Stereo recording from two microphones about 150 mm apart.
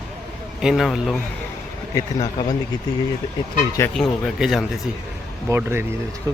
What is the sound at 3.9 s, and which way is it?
Speech, centre (ahead or behind).